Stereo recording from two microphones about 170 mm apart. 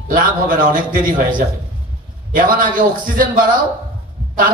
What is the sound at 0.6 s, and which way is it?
Speech, 50° right (ahead or behind).